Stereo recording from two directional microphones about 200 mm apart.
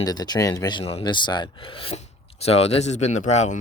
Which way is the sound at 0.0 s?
20° left (ahead or behind).